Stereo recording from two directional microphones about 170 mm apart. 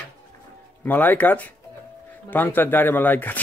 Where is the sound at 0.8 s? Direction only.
10° left (ahead or behind).